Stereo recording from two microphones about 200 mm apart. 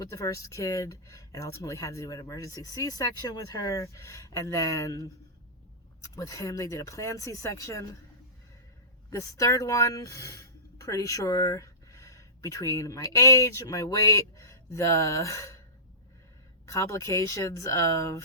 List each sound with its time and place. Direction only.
0.0 s speech: 15° left (ahead or behind)
6.1 s speech: 15° left (ahead or behind)
9.0 s speech: 15° left (ahead or behind)
16.6 s speech: 15° left (ahead or behind)